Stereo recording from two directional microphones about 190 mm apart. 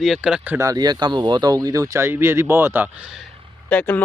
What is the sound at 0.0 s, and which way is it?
Speech, centre (ahead or behind).